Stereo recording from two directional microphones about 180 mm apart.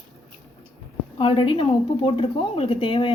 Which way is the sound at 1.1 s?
30° left (ahead or behind).